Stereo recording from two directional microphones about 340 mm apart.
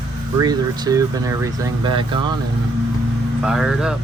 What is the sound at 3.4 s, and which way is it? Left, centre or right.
Speech, centre.